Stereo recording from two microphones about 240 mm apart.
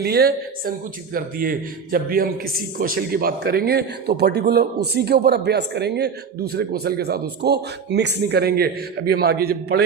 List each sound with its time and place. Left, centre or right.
0.0 s a man's voice: right